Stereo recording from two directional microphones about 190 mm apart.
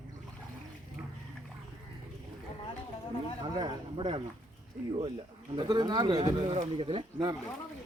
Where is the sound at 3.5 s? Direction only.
25° right (ahead or behind).